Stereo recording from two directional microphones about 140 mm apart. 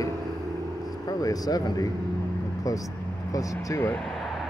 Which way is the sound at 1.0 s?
25° left (ahead or behind).